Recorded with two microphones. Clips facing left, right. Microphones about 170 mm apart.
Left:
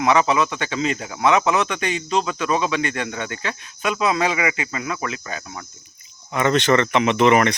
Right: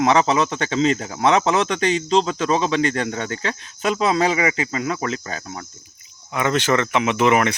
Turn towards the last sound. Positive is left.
turn(degrees=-5)  # may be behind; listen again after turning